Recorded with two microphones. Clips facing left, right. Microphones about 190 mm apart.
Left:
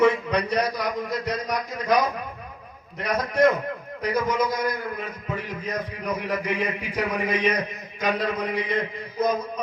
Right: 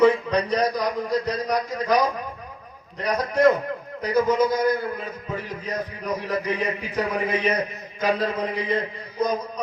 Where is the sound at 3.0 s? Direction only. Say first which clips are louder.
Right 1 dB; 35° right (ahead or behind).